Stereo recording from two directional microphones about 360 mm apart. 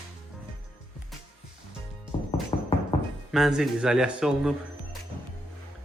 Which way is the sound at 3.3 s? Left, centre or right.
Centre.